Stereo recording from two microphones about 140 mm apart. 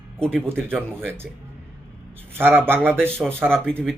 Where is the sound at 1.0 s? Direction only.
15° right (ahead or behind).